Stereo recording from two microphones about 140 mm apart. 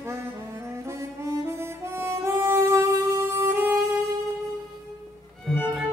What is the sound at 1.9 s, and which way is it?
Music, 15° right (ahead or behind).